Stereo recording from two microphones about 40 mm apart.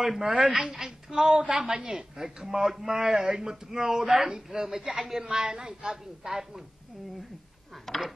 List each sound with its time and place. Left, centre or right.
0.0 s a woman's voice: centre
7.9 s speech: centre